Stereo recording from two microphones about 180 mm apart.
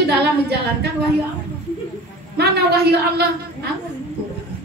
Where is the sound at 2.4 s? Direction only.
65° right (ahead or behind).